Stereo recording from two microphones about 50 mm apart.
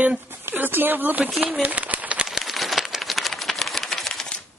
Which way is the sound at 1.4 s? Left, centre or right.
Right.